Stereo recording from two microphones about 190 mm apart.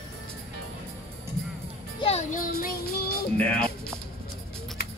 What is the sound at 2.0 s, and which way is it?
Music, 40° left (ahead or behind).